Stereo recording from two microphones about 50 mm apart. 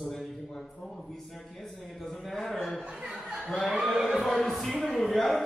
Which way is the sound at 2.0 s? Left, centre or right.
Centre.